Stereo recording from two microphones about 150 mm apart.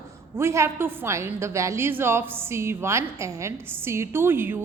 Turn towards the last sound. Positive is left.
turn(degrees=-15)  # may be behind; listen again after turning